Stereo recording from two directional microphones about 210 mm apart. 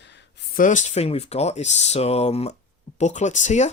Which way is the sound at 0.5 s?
35° left (ahead or behind).